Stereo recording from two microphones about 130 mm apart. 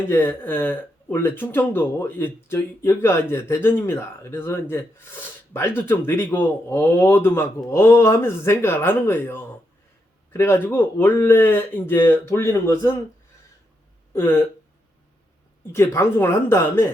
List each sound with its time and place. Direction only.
0.1 s speech: 15° left (ahead or behind)
14.1 s speech: 15° left (ahead or behind)
15.7 s speech: 20° left (ahead or behind)